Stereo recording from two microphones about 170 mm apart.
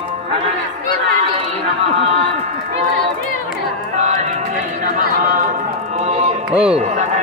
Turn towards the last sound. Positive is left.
turn(degrees=-5)  # may be behind; listen again after turning